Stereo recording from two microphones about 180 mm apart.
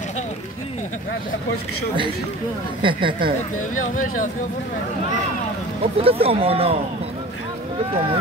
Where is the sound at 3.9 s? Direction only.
50° left (ahead or behind).